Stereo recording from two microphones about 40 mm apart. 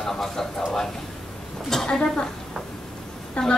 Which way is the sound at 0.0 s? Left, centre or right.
Centre.